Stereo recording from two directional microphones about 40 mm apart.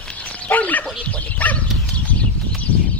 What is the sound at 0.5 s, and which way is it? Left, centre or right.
Dog, left.